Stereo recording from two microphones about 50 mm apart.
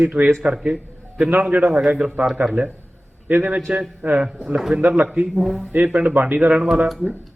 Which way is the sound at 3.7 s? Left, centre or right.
Centre.